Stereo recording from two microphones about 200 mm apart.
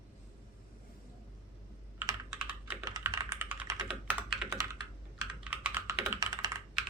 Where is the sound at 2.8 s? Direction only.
15° right (ahead or behind).